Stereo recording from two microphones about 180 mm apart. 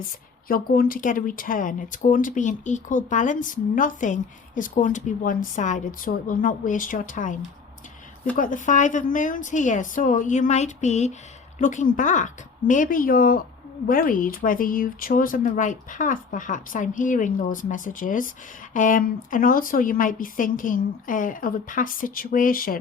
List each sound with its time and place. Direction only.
0.4 s speech: 55° left (ahead or behind)
8.4 s speech: 45° left (ahead or behind)